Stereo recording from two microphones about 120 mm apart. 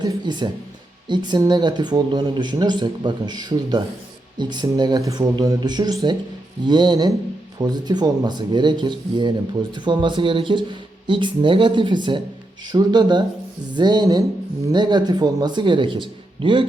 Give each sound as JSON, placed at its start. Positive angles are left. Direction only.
{"t": 0.0, "sound": "speech", "side_deg": -35}